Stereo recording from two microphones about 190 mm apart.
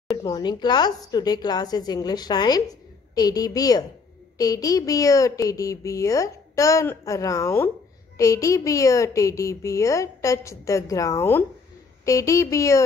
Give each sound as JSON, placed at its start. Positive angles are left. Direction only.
{"t": 0.2, "sound": "a woman's voice", "side_deg": 20}